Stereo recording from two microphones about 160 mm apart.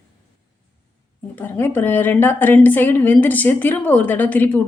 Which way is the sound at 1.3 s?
10° left (ahead or behind).